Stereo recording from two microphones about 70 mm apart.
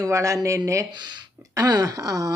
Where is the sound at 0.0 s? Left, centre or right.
Right.